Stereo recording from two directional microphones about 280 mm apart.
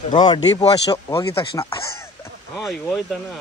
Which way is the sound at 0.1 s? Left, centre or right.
Centre.